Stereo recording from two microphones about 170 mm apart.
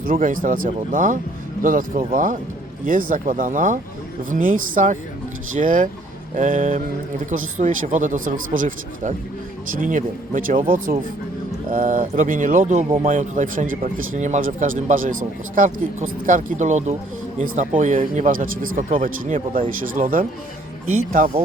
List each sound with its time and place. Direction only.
0.0 s speech: 55° right (ahead or behind)
11.7 s speech: 50° right (ahead or behind)